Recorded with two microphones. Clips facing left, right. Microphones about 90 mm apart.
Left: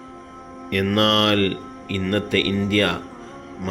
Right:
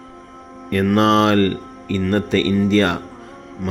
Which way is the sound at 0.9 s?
25° right (ahead or behind).